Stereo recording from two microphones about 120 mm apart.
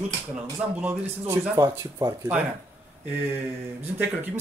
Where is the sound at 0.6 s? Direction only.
15° right (ahead or behind).